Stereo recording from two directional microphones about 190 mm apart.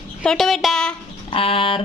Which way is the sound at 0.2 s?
Centre (ahead or behind).